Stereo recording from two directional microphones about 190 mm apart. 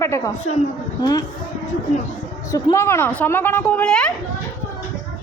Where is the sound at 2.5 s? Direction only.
15° left (ahead or behind).